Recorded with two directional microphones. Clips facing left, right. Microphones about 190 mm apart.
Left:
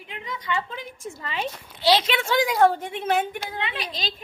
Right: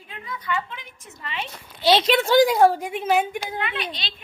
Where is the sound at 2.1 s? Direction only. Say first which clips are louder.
Right 7 dB; 40° right (ahead or behind).